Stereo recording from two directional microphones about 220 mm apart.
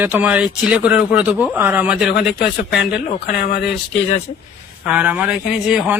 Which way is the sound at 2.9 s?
45° left (ahead or behind).